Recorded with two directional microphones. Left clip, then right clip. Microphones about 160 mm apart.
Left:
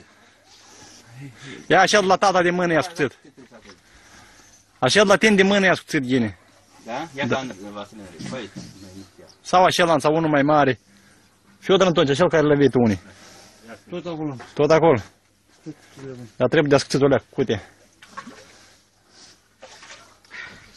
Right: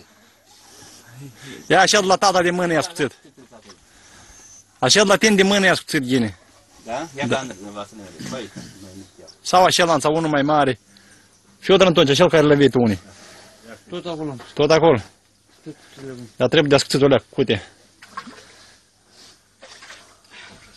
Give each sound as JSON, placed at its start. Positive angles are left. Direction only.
{"t": 1.5, "sound": "a man's voice", "side_deg": -5}
{"t": 4.7, "sound": "a man's voice", "side_deg": -5}
{"t": 9.5, "sound": "a man's voice", "side_deg": -5}
{"t": 11.6, "sound": "a man's voice", "side_deg": -20}
{"t": 12.7, "sound": "a man's voice", "side_deg": 0}
{"t": 14.5, "sound": "a man's voice", "side_deg": -5}
{"t": 16.3, "sound": "a man's voice", "side_deg": -5}
{"t": 17.0, "sound": "speech", "side_deg": -20}